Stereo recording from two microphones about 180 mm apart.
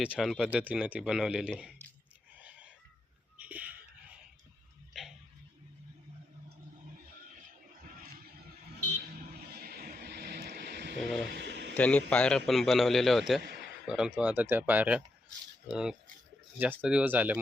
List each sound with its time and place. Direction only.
0.0 s a man's voice: 5° right (ahead or behind)
2.3 s a sound: 5° right (ahead or behind)
4.9 s tick-tock: centre (ahead or behind)
9.5 s vehicle: 60° right (ahead or behind)
11.0 s a man's voice: centre (ahead or behind)
11.3 s a sound: 70° right (ahead or behind)
11.8 s a man's voice: 5° left (ahead or behind); by 17.4 s 10° right (ahead or behind)